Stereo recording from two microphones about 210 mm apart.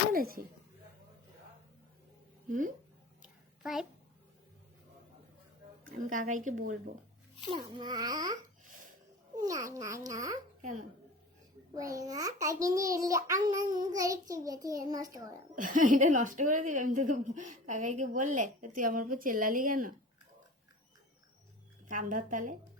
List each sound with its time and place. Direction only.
0.1 s speech: 45° right (ahead or behind)
2.5 s a woman's voice: 40° right (ahead or behind)
3.2 s a sound: centre (ahead or behind)
5.8 s a woman's voice: 40° right (ahead or behind)
7.5 s a child's voice: 20° right (ahead or behind)
11.7 s a child's voice: 15° right (ahead or behind)
15.5 s a woman's voice: 40° right (ahead or behind)
21.8 s a woman's voice: 40° right (ahead or behind)